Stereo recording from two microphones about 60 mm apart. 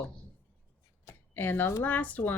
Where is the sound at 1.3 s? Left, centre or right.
Left.